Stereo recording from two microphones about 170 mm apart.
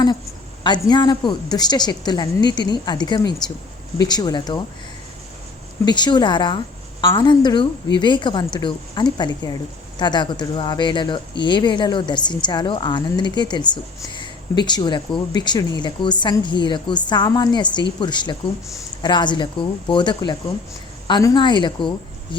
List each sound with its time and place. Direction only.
0.6 s speech: 25° left (ahead or behind)
5.8 s speech: 25° left (ahead or behind)